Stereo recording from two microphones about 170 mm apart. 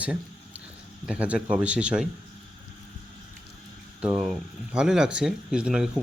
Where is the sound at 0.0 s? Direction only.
10° right (ahead or behind).